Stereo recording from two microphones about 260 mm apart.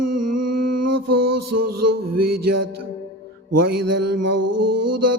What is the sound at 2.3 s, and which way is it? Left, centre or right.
Music, right.